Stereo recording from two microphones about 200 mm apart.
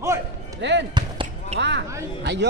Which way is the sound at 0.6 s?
60° right (ahead or behind).